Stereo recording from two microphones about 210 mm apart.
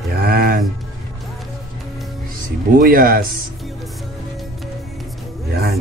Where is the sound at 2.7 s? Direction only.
45° right (ahead or behind).